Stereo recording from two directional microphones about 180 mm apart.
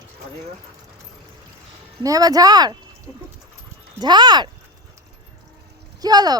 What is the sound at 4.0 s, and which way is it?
Speech, 25° right (ahead or behind).